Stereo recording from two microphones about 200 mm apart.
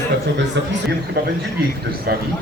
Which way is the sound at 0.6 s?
60° right (ahead or behind).